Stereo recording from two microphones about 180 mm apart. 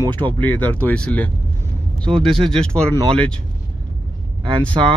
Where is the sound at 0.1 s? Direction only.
25° right (ahead or behind).